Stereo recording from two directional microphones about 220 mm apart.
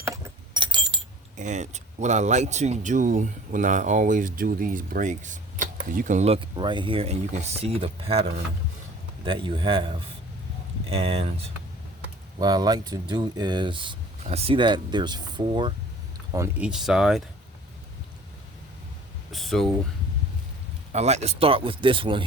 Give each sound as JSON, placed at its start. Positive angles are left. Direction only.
{"t": 0.0, "sound": "keys jangling", "side_deg": -15}
{"t": 1.4, "sound": "speech", "side_deg": -30}
{"t": 12.4, "sound": "speech", "side_deg": -20}
{"t": 16.3, "sound": "speech", "side_deg": -10}
{"t": 19.3, "sound": "speech", "side_deg": 0}
{"t": 20.9, "sound": "speech", "side_deg": -30}